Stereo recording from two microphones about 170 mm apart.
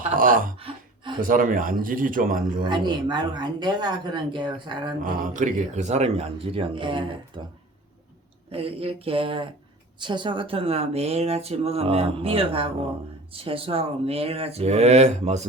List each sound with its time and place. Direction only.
0.1 s a sound: 55° right (ahead or behind)
1.2 s speech: 55° right (ahead or behind)
2.6 s speech: 25° right (ahead or behind)
5.0 s speech: 50° right (ahead or behind); by 7.5 s 30° right (ahead or behind)
8.5 s speech: 35° right (ahead or behind)